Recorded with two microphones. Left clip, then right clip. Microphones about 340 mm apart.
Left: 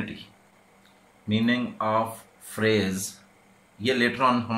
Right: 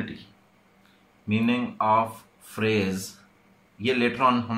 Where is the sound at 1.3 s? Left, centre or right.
Centre.